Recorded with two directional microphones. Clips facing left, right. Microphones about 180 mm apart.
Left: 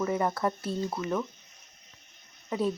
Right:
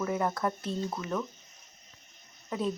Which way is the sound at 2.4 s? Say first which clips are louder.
Left 3 dB; 5° left (ahead or behind).